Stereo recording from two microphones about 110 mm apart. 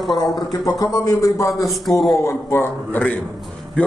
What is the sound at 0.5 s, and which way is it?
Speech, 35° left (ahead or behind).